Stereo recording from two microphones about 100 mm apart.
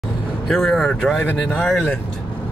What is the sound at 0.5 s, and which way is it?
Speech, 5° left (ahead or behind).